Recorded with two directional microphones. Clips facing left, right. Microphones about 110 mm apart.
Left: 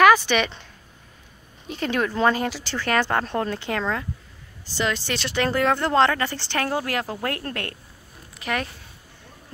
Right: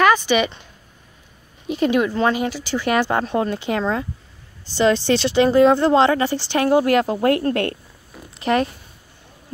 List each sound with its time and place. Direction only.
0.0 s speech: centre (ahead or behind)
1.7 s speech: 15° right (ahead or behind)